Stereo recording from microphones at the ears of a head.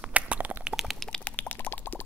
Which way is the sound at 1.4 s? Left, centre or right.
Left.